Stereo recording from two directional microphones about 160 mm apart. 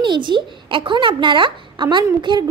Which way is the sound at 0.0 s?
30° right (ahead or behind).